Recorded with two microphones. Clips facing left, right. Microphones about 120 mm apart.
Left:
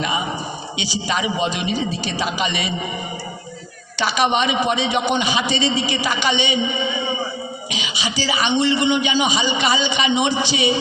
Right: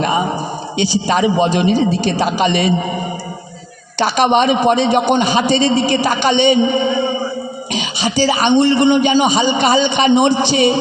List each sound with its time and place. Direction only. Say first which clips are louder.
0.0 s a sound: right 7 dB; 45° right (ahead or behind)
1.0 s a man's voice: right 6 dB; 45° right (ahead or behind)
3.9 s a man's voice: right 6 dB; 45° right (ahead or behind)